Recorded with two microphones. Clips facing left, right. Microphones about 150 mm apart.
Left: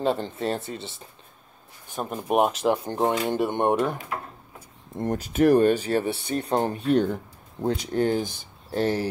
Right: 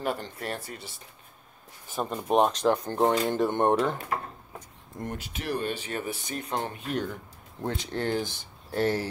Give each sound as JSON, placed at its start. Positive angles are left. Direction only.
{"t": 0.0, "sound": "speech", "side_deg": 25}
{"t": 2.0, "sound": "speech", "side_deg": 10}
{"t": 5.0, "sound": "speech", "side_deg": 40}
{"t": 7.9, "sound": "speech", "side_deg": 15}